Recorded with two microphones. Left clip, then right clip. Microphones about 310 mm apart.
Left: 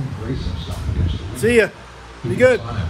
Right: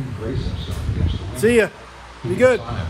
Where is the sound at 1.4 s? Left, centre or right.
Centre.